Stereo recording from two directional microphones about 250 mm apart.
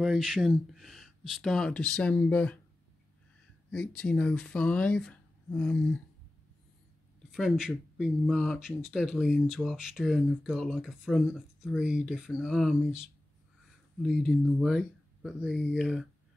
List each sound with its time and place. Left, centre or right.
0.0 s speech: centre
3.7 s speech: centre
7.2 s speech: centre
14.0 s speech: centre